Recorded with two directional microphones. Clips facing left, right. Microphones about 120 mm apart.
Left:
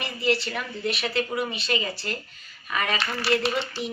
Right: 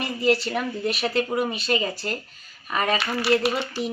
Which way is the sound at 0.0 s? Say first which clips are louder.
Right 4 dB; 40° right (ahead or behind).